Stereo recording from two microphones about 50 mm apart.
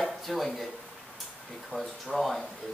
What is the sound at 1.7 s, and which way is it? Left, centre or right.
Speech, centre.